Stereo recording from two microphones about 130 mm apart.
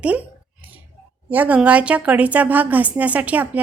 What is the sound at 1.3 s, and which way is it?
A woman's voice, 10° right (ahead or behind).